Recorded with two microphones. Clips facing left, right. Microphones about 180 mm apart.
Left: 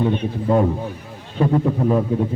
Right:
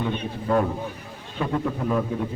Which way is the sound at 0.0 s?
25° left (ahead or behind).